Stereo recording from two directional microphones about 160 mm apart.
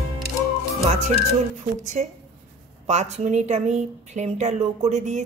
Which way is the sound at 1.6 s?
45° right (ahead or behind).